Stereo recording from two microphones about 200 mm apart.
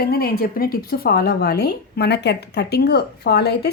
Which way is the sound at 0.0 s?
50° left (ahead or behind).